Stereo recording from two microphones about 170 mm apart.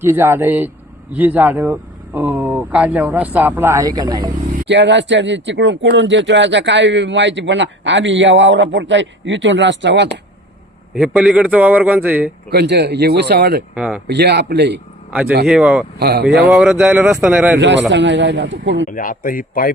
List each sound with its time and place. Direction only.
0.0 s speech: 15° right (ahead or behind)
4.7 s speech: 90° right
10.9 s speech: 5° right (ahead or behind)
12.5 s speech: 75° right (ahead or behind)
13.7 s speech: 5° right (ahead or behind)
14.1 s speech: 80° right
15.4 s speech: 5° right (ahead or behind)
16.0 s speech: 75° right (ahead or behind)
16.5 s speech: centre (ahead or behind)
17.6 s speech: 90° right
18.9 s speech: 55° left (ahead or behind)